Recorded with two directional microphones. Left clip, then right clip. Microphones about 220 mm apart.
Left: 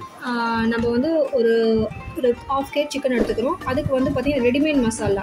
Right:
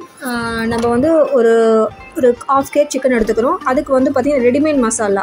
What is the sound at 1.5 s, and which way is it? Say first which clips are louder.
A woman's voice: right 8 dB; 25° right (ahead or behind).